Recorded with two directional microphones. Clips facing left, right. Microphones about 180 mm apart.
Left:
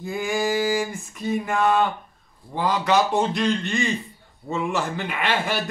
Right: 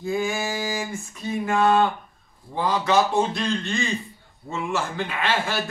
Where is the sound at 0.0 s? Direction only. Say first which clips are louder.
Left 1 dB; 15° left (ahead or behind).